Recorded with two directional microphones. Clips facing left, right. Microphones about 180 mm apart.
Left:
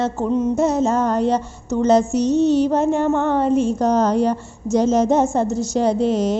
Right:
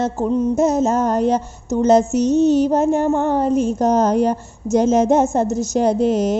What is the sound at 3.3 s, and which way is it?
A woman's voice, 40° right (ahead or behind).